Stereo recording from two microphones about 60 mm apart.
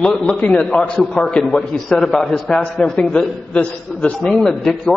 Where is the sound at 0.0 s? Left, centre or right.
Centre.